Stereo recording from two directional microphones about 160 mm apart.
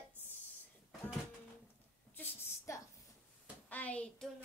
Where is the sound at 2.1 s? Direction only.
10° left (ahead or behind).